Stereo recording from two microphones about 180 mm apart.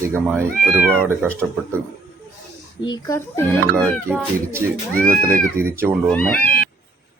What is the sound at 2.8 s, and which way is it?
Speech, 20° left (ahead or behind).